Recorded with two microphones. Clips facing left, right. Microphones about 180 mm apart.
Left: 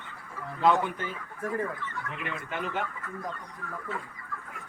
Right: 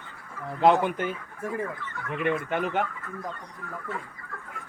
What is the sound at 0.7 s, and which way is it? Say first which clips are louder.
Speech: right 4 dB; 70° right (ahead or behind).